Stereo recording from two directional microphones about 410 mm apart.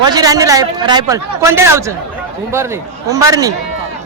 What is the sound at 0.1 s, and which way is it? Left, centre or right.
A man's voice, centre.